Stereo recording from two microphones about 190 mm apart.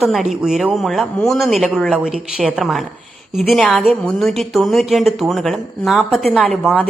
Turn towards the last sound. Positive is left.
turn(degrees=5)  # may be behind; listen again after turning